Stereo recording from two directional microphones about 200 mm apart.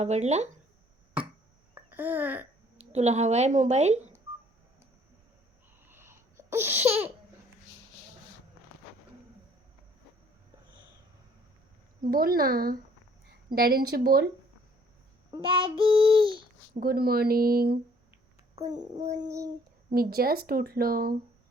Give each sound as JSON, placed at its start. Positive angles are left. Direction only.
{"t": 0.0, "sound": "speech", "side_deg": -35}
{"t": 1.7, "sound": "speech", "side_deg": -10}
{"t": 2.7, "sound": "speech", "side_deg": -30}
{"t": 5.9, "sound": "babbling", "side_deg": -10}
{"t": 11.9, "sound": "speech", "side_deg": -45}
{"t": 15.3, "sound": "speech", "side_deg": -25}
{"t": 16.8, "sound": "speech", "side_deg": -50}
{"t": 18.9, "sound": "speech", "side_deg": -35}
{"t": 19.2, "sound": "child singing", "side_deg": -15}
{"t": 19.9, "sound": "speech", "side_deg": -50}